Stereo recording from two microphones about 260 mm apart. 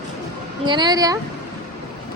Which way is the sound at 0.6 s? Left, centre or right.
Centre.